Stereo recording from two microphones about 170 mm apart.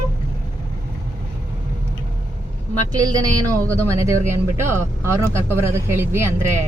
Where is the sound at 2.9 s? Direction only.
20° right (ahead or behind).